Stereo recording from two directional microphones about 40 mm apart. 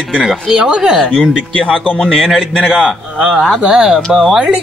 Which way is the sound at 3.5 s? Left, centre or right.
Right.